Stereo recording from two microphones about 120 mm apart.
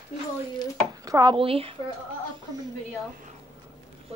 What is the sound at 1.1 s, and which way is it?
Speech, 30° right (ahead or behind).